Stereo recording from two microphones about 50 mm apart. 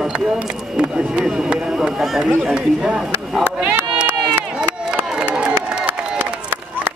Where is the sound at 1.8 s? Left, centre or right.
Centre.